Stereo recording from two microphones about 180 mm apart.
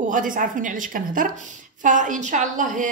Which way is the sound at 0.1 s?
50° right (ahead or behind).